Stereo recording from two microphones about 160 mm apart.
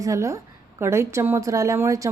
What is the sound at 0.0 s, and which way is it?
A woman's voice, 20° right (ahead or behind).